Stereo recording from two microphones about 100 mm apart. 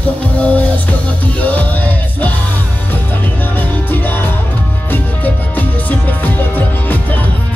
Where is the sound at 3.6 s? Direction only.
20° left (ahead or behind).